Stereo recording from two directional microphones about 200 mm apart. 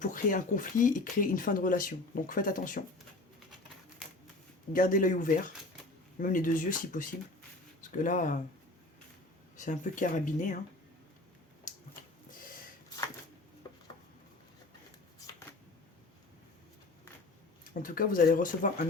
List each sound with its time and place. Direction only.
0.0 s speech: 40° left (ahead or behind)
4.7 s speech: 40° left (ahead or behind)
9.6 s speech: 40° left (ahead or behind)
17.8 s speech: 45° left (ahead or behind)